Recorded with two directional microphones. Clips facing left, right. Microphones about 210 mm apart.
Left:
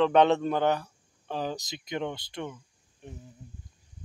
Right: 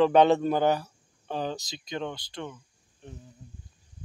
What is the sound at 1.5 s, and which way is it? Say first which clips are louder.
Speech: left 1 dB; 20° left (ahead or behind).